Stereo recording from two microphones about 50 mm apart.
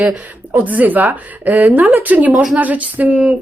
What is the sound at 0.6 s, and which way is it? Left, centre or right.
Speech, right.